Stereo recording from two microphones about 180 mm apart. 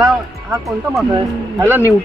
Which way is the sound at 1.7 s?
10° right (ahead or behind).